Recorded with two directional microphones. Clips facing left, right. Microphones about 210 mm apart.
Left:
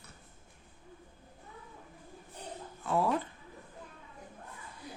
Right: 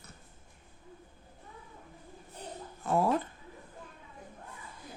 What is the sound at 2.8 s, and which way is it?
Speech, 45° right (ahead or behind).